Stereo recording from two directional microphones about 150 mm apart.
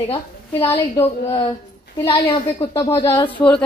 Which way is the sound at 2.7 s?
15° left (ahead or behind).